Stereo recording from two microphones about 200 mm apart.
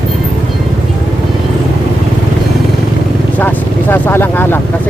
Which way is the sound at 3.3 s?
10° left (ahead or behind).